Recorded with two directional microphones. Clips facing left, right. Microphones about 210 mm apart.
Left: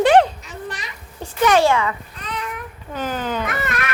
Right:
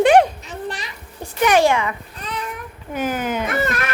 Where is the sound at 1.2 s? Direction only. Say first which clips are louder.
Even; 15° right (ahead or behind).